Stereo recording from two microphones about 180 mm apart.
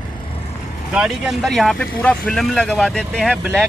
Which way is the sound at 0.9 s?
5° right (ahead or behind).